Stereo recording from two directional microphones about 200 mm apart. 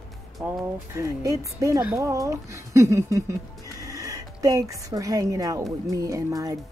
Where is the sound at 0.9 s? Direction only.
15° right (ahead or behind).